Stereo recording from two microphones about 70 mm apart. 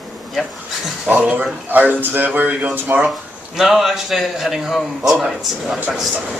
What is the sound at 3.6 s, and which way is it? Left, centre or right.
Speech, centre.